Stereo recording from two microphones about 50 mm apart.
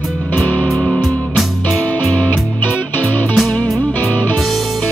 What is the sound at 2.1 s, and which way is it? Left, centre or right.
Music, left.